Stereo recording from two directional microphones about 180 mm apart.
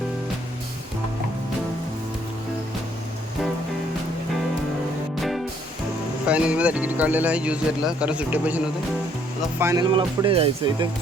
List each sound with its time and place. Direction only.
6.2 s speech: 5° right (ahead or behind); by 10.8 s 30° right (ahead or behind)